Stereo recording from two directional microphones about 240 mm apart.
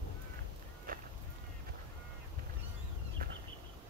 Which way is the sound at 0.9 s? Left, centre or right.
Right.